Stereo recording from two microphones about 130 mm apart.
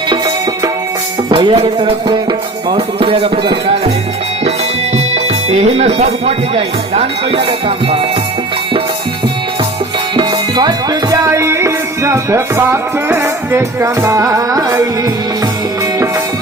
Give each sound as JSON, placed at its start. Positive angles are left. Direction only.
{"t": 1.3, "sound": "music", "side_deg": -40}
{"t": 2.6, "sound": "speech", "side_deg": -45}
{"t": 5.1, "sound": "speech", "side_deg": -55}
{"t": 10.2, "sound": "music", "side_deg": -35}